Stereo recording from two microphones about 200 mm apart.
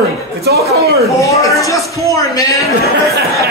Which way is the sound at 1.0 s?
15° left (ahead or behind).